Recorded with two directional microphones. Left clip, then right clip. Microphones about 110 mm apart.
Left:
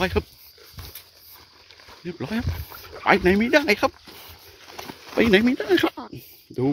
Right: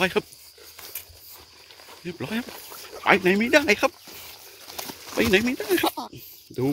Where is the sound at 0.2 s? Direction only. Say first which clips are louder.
Even; 15° left (ahead or behind).